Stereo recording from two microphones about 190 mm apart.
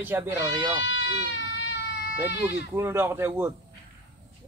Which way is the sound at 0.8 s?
75° left (ahead or behind).